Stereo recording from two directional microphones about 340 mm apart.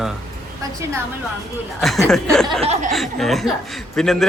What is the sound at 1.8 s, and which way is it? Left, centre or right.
Speech, centre.